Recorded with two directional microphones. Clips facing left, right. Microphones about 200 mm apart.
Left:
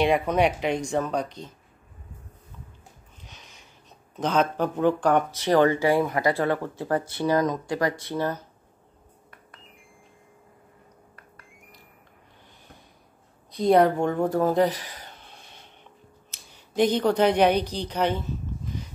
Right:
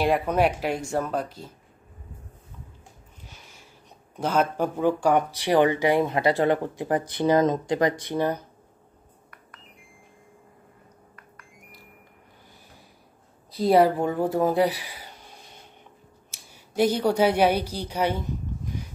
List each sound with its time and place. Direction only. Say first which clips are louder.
0.0 s speech: left 1 dB; 5° right (ahead or behind)
3.3 s a sound: even; 10° right (ahead or behind)
4.2 s speech: even; 10° right (ahead or behind)
13.5 s a woman's voice: even; 5° right (ahead or behind)